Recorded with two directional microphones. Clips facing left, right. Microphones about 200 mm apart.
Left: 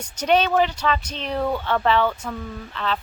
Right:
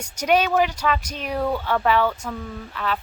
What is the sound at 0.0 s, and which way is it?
Speech, 10° right (ahead or behind).